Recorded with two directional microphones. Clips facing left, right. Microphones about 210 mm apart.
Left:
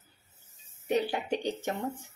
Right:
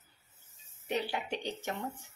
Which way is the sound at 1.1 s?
45° left (ahead or behind).